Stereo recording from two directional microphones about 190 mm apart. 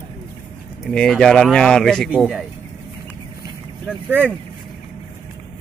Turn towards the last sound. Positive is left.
turn(degrees=-10)  # may be behind; listen again after turning